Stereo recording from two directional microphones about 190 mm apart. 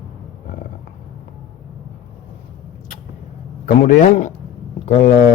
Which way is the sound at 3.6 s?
40° left (ahead or behind).